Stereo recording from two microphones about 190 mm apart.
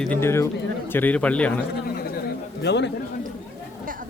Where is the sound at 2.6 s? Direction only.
65° left (ahead or behind).